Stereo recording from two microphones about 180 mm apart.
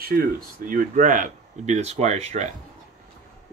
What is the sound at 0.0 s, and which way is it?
Speech, 55° right (ahead or behind).